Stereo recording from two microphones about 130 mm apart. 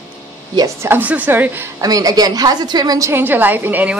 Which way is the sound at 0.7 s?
15° right (ahead or behind).